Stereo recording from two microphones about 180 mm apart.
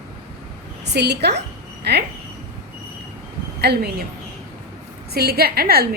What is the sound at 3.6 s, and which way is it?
Speech, 65° right (ahead or behind).